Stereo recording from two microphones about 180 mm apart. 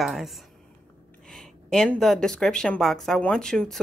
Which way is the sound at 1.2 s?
Centre (ahead or behind).